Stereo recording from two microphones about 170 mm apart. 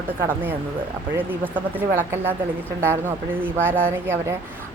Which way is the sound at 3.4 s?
10° right (ahead or behind).